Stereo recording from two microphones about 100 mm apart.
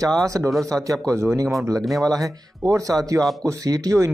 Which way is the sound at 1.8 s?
Centre (ahead or behind).